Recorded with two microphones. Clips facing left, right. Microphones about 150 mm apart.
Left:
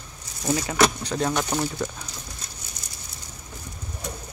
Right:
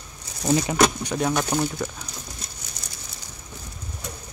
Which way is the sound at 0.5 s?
20° right (ahead or behind).